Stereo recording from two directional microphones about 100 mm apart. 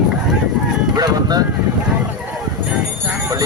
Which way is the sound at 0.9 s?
40° right (ahead or behind).